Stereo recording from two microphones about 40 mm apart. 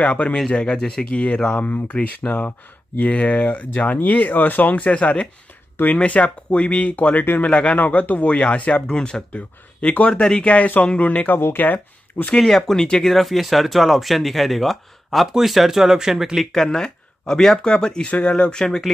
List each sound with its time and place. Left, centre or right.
0.0 s speech: left
0.5 s speech: left
1.0 s speech: left
7.2 s speech: left
7.4 s speech: left
7.7 s speech: left
9.3 s speech: left
12.4 s speech: centre
16.5 s speech: centre
18.0 s speech: left
18.3 s speech: centre